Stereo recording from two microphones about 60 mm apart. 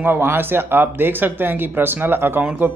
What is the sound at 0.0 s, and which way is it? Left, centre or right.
Speech, right.